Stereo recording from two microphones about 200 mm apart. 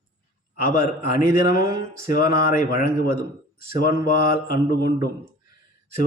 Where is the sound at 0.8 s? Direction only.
45° left (ahead or behind).